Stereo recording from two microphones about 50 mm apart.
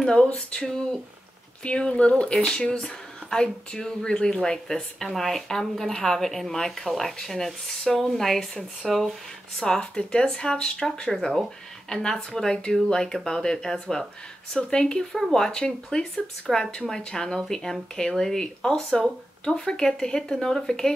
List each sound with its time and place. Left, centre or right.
0.0 s speech: centre